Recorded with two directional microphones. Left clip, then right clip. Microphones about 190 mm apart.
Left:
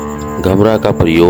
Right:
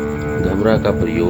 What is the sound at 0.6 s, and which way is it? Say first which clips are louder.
Speech: left 4 dB; 45° left (ahead or behind).